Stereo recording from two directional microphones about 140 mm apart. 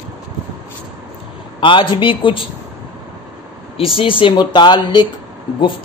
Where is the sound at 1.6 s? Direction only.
35° left (ahead or behind).